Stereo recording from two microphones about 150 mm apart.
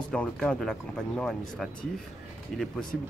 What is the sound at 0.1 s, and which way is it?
A man's voice, 5° left (ahead or behind).